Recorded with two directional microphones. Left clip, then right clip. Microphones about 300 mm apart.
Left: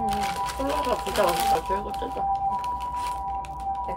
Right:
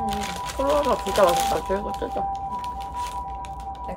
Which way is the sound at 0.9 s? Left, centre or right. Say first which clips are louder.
Right 4 dB; centre.